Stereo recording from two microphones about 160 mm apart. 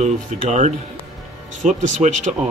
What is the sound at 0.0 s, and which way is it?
Speech, 50° right (ahead or behind).